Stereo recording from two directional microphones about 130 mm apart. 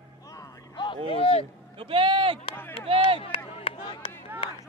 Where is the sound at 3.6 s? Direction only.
40° left (ahead or behind).